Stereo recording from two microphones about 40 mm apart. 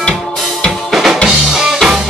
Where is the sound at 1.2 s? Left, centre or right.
Centre.